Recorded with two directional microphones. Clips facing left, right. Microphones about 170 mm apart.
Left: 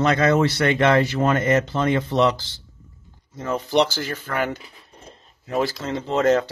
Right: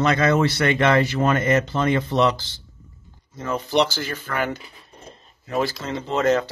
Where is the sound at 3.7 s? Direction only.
40° left (ahead or behind).